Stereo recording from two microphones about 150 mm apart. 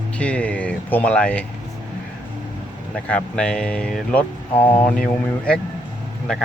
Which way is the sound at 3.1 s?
5° left (ahead or behind).